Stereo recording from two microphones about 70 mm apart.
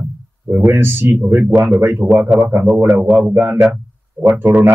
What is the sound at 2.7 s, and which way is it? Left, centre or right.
Speech, centre.